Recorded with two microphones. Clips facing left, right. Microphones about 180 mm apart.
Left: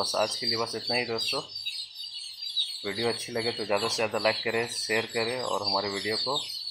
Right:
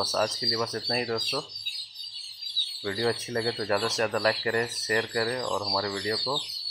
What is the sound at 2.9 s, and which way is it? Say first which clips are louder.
Speech: right 2 dB; 5° left (ahead or behind).